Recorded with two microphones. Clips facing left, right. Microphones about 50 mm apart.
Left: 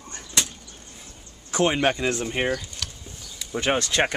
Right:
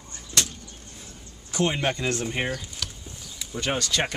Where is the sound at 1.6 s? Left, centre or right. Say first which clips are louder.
Left 4 dB; left.